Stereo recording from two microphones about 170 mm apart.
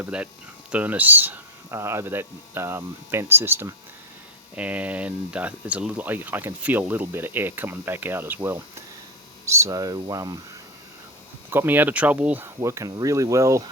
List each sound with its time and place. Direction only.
0.0 s speech: 10° right (ahead or behind)
11.5 s speech: 10° right (ahead or behind)